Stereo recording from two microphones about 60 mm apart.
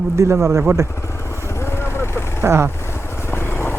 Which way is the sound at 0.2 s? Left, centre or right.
Right.